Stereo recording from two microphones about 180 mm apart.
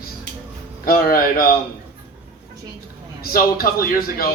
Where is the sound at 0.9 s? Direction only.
55° left (ahead or behind).